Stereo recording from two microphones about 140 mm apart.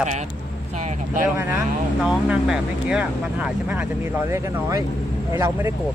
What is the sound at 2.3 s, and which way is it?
Speech, 5° right (ahead or behind).